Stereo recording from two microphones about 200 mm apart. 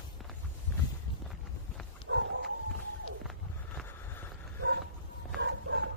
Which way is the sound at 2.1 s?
65° right (ahead or behind).